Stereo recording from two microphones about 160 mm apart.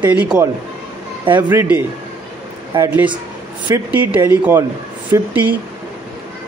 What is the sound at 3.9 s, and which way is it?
A man's voice, 10° right (ahead or behind).